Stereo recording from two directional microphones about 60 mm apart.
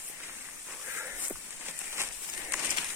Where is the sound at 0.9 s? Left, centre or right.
Right.